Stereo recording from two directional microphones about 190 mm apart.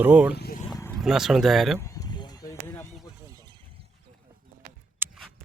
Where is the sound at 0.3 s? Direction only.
55° left (ahead or behind).